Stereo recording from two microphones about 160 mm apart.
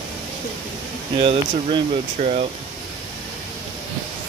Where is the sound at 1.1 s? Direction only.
35° right (ahead or behind).